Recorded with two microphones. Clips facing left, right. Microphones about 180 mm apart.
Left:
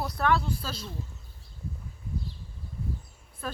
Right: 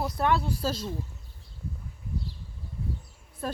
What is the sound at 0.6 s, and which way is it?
Speech, 40° right (ahead or behind).